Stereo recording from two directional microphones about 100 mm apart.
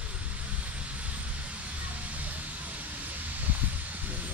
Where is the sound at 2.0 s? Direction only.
15° right (ahead or behind).